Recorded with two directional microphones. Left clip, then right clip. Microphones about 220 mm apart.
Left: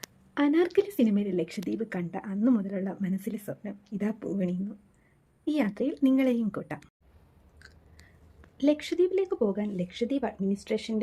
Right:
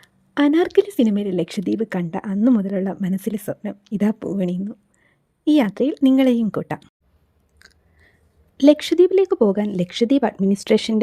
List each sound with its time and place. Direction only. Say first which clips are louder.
0.3 s speech: right 8 dB; 40° right (ahead or behind)
7.6 s chewing: right 4 dB; 30° right (ahead or behind)
8.5 s speech: right 12 dB; 45° right (ahead or behind)